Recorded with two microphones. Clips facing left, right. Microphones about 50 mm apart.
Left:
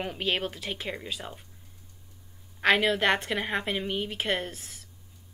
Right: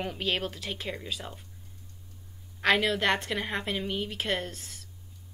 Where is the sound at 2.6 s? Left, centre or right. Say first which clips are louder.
Left 2 dB; centre.